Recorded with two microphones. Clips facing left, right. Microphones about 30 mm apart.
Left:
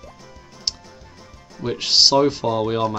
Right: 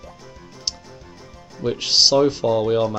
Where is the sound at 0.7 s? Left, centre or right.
Centre.